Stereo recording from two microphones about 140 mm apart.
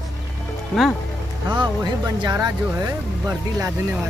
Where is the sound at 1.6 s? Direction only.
30° right (ahead or behind).